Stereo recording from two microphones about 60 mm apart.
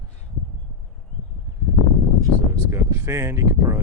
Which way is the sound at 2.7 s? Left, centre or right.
Right.